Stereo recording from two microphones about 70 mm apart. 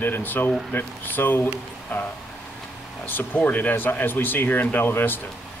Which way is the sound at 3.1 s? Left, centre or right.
Left.